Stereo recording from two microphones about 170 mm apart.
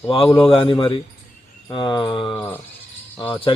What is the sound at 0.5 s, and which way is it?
A man's voice, 30° left (ahead or behind).